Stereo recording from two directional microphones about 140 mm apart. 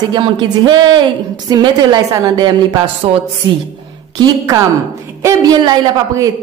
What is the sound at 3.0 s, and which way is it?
Speech, 40° right (ahead or behind).